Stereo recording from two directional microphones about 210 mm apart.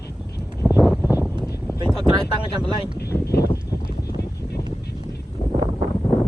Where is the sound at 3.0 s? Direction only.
50° left (ahead or behind).